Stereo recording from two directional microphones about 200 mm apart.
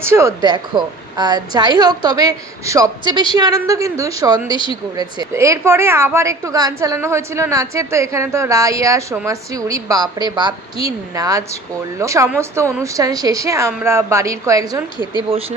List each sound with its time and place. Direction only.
0.0 s a woman's voice: 15° right (ahead or behind)
4.5 s a woman's voice: 25° left (ahead or behind)
4.9 s a woman's voice: 15° right (ahead or behind)